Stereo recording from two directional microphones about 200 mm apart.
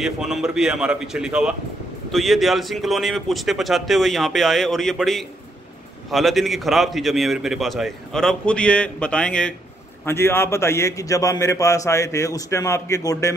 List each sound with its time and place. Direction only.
0.0 s a man's voice: centre (ahead or behind); by 13.3 s 15° left (ahead or behind)